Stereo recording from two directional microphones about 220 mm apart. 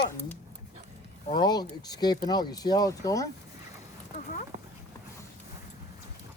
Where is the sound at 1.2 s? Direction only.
20° left (ahead or behind).